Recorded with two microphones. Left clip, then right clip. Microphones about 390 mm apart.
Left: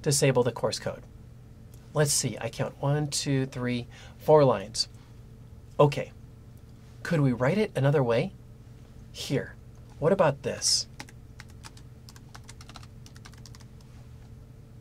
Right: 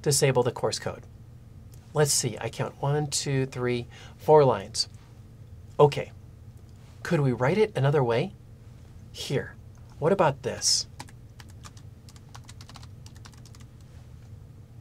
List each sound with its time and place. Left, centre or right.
0.0 s speech: centre
12.3 s typing: centre